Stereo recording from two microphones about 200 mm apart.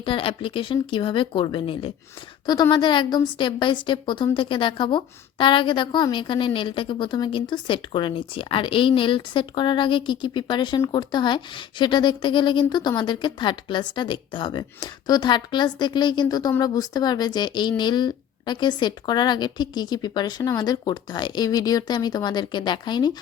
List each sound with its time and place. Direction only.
0.0 s a woman's voice: 25° left (ahead or behind)